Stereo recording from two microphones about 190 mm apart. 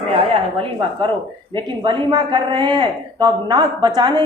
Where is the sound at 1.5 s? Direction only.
25° right (ahead or behind).